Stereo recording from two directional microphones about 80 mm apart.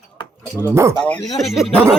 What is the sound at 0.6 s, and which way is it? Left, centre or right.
Speech, right.